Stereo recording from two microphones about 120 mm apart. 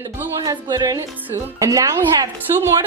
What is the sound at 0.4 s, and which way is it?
Speech, 35° right (ahead or behind).